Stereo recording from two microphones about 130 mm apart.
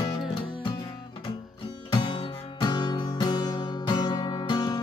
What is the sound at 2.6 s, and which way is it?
Music, 35° left (ahead or behind).